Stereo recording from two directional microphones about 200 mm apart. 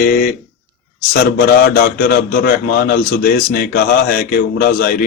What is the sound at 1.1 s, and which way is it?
A man's voice, 50° left (ahead or behind).